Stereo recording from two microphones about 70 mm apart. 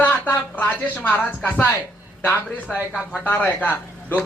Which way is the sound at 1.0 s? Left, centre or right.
Left.